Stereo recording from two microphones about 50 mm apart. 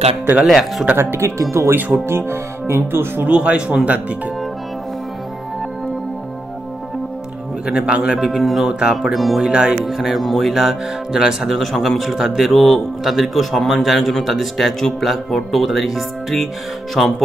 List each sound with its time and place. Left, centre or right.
0.5 s a man's voice: centre
0.9 s speech: right
2.0 s speech: right
3.3 s speech: right
7.6 s speech: centre
8.2 s a man's voice: centre
9.5 s speech: centre
9.8 s a man's voice: centre